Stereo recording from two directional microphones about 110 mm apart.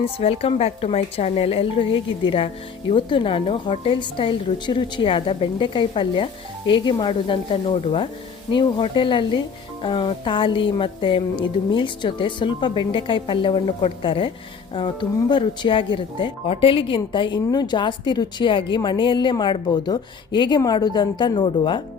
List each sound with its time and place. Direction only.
0.0 s a woman's voice: 65° left (ahead or behind); by 21.8 s 45° left (ahead or behind)